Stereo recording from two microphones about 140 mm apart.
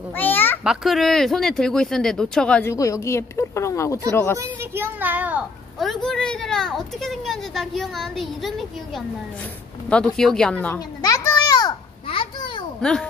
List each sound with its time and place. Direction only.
0.1 s a sound: 15° left (ahead or behind)
0.7 s speech: centre (ahead or behind)
2.7 s a woman's voice: 20° left (ahead or behind)
4.6 s a sound: 15° right (ahead or behind)
5.8 s speech: centre (ahead or behind)
11.0 s children playing: 25° left (ahead or behind)
12.1 s babbling: 35° left (ahead or behind)